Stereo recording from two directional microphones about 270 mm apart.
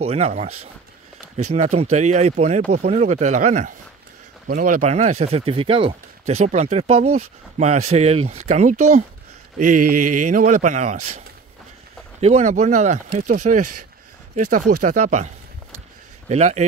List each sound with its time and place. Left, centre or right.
0.0 s speech: right
12.2 s speech: right
16.3 s speech: right